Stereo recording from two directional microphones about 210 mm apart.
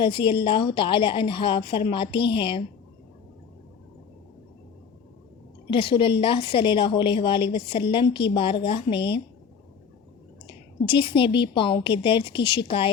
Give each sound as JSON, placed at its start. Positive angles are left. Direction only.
{"t": 0.0, "sound": "a woman's voice", "side_deg": 25}
{"t": 5.7, "sound": "a woman's voice", "side_deg": 25}
{"t": 10.4, "sound": "a woman's voice", "side_deg": 25}